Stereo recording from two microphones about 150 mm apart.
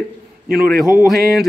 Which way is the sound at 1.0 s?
Centre (ahead or behind).